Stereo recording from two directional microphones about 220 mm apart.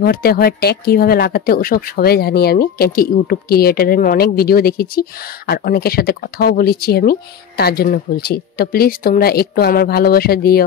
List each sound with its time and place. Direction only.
0.0 s speech: 45° left (ahead or behind)